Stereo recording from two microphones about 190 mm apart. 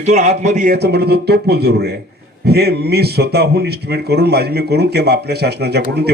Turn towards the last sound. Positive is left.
turn(degrees=-60)  # may be behind; listen again after turning